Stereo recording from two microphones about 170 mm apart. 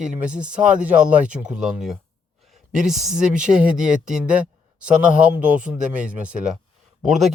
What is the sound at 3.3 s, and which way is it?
Speech, 50° right (ahead or behind).